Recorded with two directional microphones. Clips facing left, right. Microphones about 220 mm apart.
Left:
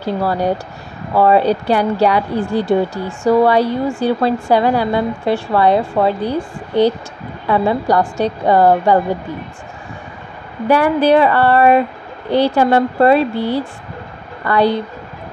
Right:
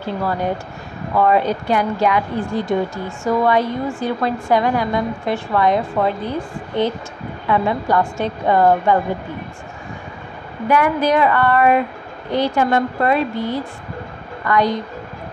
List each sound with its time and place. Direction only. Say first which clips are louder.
0.0 s a woman's voice: left 4 dB; 35° left (ahead or behind)
7.4 s a woman's voice: left 4 dB; 35° left (ahead or behind)
10.7 s a woman's voice: left 4 dB; 30° left (ahead or behind)